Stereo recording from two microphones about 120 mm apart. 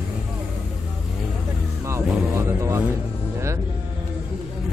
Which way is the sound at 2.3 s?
25° right (ahead or behind).